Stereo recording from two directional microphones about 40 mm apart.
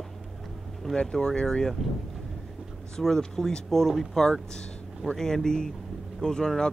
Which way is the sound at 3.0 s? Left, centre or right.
Centre.